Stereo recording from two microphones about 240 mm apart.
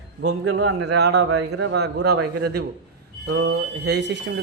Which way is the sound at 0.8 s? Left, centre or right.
Right.